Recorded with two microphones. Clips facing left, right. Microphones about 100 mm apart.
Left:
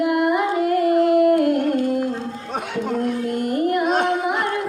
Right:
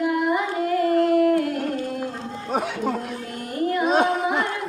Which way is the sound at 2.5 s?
5° right (ahead or behind).